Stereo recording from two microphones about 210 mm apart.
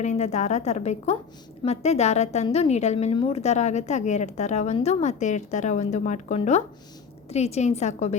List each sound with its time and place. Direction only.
0.0 s a woman's voice: 35° left (ahead or behind)